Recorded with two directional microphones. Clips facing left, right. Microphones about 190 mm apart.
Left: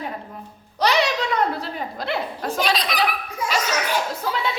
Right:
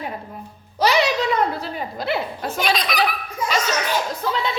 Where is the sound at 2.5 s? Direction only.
35° left (ahead or behind).